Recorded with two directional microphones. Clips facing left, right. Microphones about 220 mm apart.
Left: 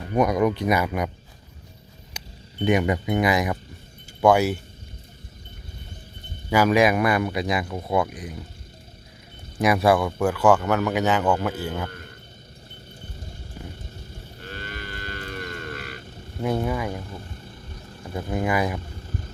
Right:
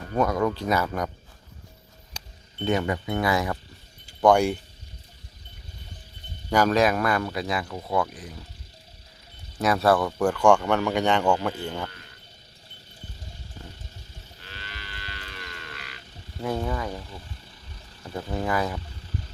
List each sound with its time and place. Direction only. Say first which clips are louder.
0.0 s speech: left 3 dB; 15° left (ahead or behind)
2.1 s speech: left 5 dB; 15° left (ahead or behind)
4.2 s a man's voice: left 1 dB; 5° left (ahead or behind)
6.5 s speech: left 2 dB; 10° left (ahead or behind)
9.6 s a man's voice: left 2 dB; 15° left (ahead or behind)
11.9 s a sound: left 8 dB; 50° left (ahead or behind)
14.3 s livestock: left 8 dB; 50° left (ahead or behind)
16.4 s speech: left 3 dB; 15° left (ahead or behind)
18.1 s speech: left 3 dB; 15° left (ahead or behind)
18.9 s music: left 2 dB; 50° left (ahead or behind)